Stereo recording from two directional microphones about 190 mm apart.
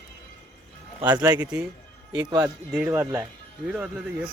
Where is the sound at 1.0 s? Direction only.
20° right (ahead or behind).